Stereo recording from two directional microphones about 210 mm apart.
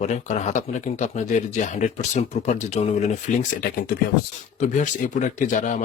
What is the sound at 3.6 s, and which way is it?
Speech, 45° left (ahead or behind).